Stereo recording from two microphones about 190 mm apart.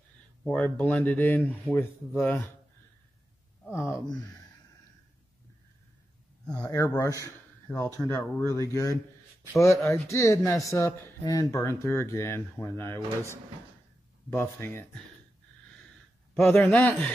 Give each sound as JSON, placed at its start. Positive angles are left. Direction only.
{"t": 0.4, "sound": "speech", "side_deg": 10}
{"t": 3.6, "sound": "speech", "side_deg": 15}
{"t": 6.6, "sound": "speech", "side_deg": 20}
{"t": 7.7, "sound": "speech", "side_deg": 5}
{"t": 14.3, "sound": "speech", "side_deg": 10}
{"t": 16.4, "sound": "speech", "side_deg": 10}